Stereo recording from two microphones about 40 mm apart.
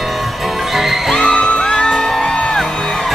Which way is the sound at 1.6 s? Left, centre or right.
Centre.